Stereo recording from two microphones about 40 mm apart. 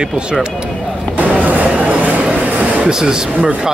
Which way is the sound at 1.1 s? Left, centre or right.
Right.